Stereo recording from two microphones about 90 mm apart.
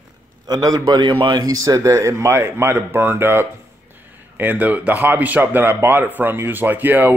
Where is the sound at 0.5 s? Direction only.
45° right (ahead or behind).